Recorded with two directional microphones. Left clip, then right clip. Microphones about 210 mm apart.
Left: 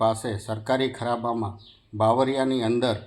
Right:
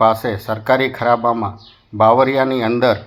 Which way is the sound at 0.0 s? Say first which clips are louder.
Right 10 dB; 20° right (ahead or behind).